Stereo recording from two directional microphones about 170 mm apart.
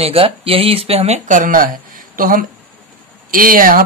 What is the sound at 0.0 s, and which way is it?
Speech, 35° right (ahead or behind).